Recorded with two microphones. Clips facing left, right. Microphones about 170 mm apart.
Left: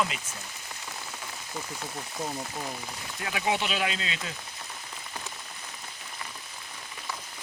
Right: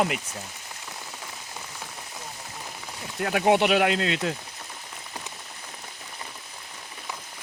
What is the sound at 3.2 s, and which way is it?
Speech, 50° right (ahead or behind).